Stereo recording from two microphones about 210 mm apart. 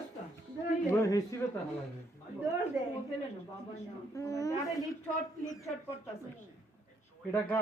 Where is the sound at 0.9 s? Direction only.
15° left (ahead or behind).